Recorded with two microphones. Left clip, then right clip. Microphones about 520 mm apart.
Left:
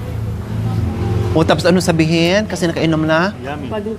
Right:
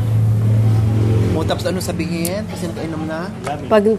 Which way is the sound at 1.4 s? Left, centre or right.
Left.